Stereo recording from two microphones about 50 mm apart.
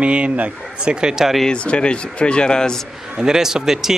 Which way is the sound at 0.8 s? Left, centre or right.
Centre.